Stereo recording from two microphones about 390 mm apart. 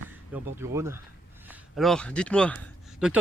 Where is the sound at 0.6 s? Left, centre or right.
Centre.